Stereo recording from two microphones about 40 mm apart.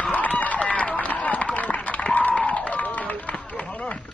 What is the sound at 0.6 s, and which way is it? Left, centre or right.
Run, left.